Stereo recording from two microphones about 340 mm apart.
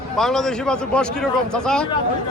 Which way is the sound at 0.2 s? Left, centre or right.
Centre.